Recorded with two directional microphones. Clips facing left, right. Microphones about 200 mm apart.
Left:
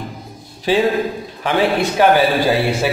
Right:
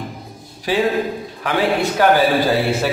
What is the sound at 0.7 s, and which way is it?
A man's voice, 25° left (ahead or behind).